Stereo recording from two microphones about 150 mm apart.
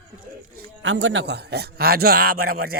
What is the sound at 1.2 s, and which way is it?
Speech, 90° right.